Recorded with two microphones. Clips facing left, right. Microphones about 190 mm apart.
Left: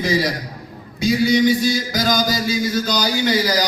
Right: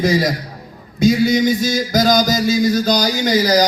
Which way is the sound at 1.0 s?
45° right (ahead or behind).